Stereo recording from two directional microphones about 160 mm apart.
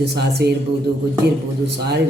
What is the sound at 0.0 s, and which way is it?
Speech, 90° right.